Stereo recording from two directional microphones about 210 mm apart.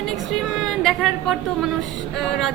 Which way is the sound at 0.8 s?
Centre (ahead or behind).